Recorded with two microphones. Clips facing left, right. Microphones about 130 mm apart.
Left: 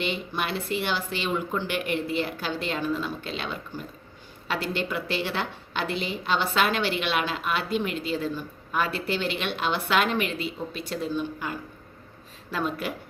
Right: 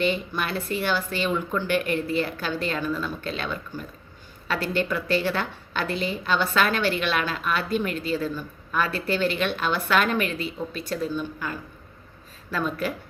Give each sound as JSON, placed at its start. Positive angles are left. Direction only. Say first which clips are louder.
{"t": 0.0, "sound": "a woman's voice", "louder": "right 4 dB", "side_deg": 15}